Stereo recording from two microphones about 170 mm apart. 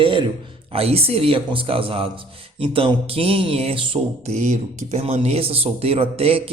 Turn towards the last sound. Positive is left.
turn(degrees=-35)  # may be behind; listen again after turning